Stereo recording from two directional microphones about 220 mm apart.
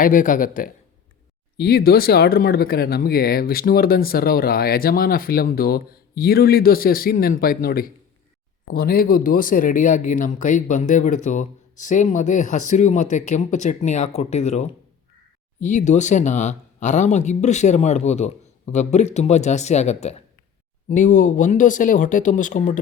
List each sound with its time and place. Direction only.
0.0 s speech: 35° left (ahead or behind)